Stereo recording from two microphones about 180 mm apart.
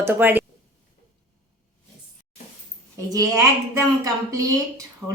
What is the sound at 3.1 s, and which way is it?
A woman's voice, 20° right (ahead or behind).